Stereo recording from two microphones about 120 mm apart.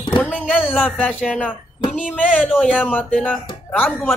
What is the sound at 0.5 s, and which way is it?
Speech, 5° right (ahead or behind).